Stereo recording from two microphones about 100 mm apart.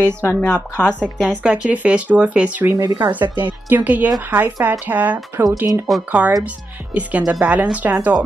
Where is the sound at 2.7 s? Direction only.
45° right (ahead or behind).